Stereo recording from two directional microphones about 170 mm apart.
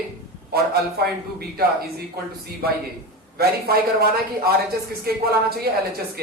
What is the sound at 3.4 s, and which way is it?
Speech, 65° right (ahead or behind).